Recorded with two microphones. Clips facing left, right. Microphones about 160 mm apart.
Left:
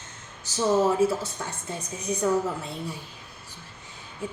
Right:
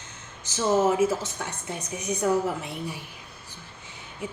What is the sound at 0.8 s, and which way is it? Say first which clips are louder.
Speech: even; 20° right (ahead or behind).